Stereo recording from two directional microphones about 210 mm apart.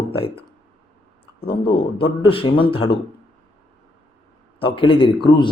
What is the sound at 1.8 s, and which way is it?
A man's voice, 25° left (ahead or behind).